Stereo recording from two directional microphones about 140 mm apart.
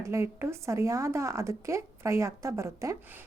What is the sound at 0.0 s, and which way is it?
Speech, 20° right (ahead or behind).